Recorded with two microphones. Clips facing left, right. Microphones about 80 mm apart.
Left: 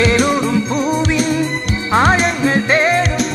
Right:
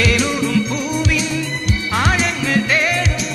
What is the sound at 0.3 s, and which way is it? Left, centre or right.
Music, left.